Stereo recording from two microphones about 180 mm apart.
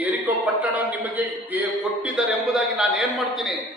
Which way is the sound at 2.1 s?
5° right (ahead or behind).